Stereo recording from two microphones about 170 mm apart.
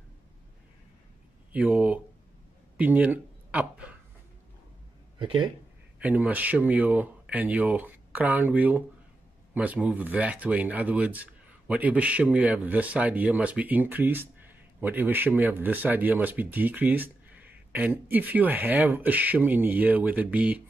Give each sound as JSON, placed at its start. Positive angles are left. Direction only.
{"t": 1.5, "sound": "speech", "side_deg": -10}
{"t": 5.2, "sound": "speech", "side_deg": -30}
{"t": 5.9, "sound": "speech", "side_deg": -10}